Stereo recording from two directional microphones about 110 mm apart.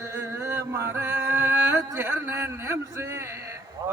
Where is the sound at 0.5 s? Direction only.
25° right (ahead or behind).